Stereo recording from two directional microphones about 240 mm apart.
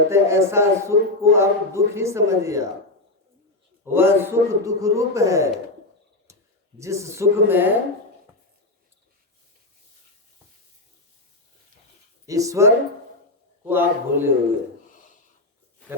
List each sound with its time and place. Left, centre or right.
0.1 s a man's voice: centre
3.9 s a man's voice: centre
6.7 s a man's voice: centre
12.2 s a man's voice: centre
14.8 s a sound: left